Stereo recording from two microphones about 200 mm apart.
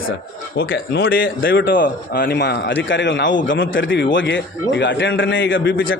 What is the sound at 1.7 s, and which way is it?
A man's voice, 45° left (ahead or behind).